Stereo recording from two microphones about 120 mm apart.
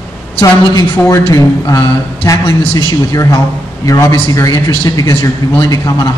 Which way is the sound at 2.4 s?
55° left (ahead or behind).